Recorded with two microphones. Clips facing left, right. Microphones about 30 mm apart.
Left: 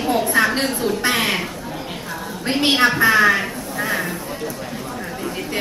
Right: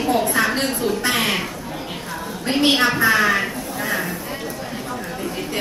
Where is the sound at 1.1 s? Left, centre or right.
Centre.